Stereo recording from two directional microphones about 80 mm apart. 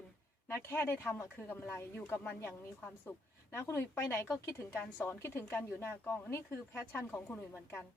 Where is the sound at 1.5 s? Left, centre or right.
Left.